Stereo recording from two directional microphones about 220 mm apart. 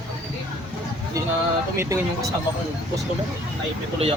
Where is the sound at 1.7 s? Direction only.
15° right (ahead or behind).